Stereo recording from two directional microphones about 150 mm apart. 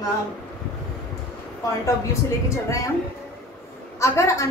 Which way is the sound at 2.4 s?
20° left (ahead or behind).